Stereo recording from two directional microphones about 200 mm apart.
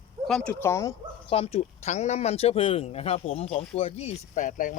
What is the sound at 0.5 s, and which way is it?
Speech, 15° left (ahead or behind).